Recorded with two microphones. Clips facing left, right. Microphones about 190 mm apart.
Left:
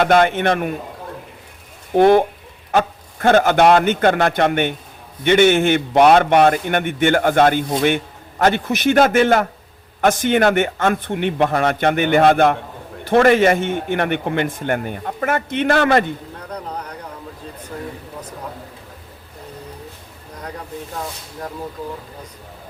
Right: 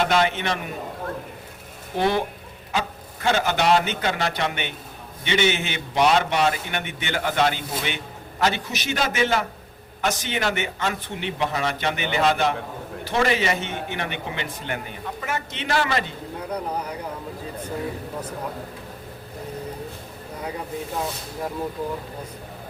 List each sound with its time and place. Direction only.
0.0 s a man's voice: 55° left (ahead or behind)
2.0 s a man's voice: 55° left (ahead or behind)
16.5 s speech: 10° right (ahead or behind)